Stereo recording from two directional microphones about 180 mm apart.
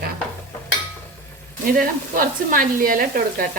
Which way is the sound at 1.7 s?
50° right (ahead or behind).